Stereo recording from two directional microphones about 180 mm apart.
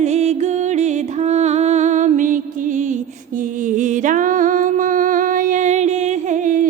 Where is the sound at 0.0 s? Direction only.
40° right (ahead or behind).